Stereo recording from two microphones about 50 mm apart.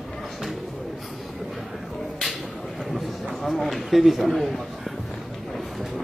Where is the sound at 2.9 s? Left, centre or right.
Centre.